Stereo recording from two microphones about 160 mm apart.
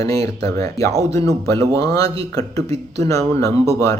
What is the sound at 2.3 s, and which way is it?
Speech, 20° left (ahead or behind).